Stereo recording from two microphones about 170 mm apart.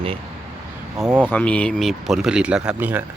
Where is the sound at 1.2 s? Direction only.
10° left (ahead or behind); by 3.0 s 10° right (ahead or behind).